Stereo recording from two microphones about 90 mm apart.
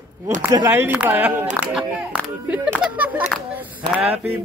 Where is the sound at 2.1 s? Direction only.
15° right (ahead or behind).